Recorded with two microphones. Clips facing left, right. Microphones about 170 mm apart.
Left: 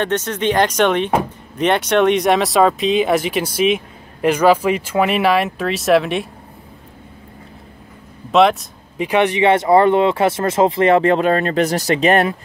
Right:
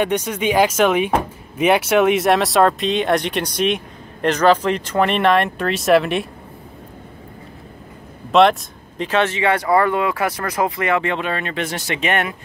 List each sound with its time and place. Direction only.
0.0 s speech: 10° right (ahead or behind)
8.3 s a sound: centre (ahead or behind)
9.0 s speech: 15° left (ahead or behind); by 12.4 s 35° left (ahead or behind)